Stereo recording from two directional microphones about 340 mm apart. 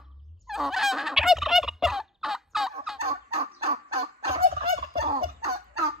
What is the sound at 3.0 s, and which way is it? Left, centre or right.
Fowl, centre.